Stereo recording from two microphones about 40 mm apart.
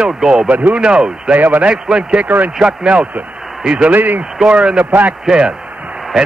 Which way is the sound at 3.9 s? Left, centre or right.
Right.